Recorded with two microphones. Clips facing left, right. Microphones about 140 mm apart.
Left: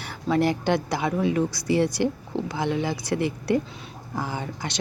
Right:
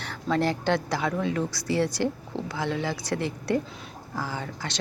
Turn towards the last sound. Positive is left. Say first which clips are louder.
# left 2 dB
turn(degrees=15)  # may be behind; listen again after turning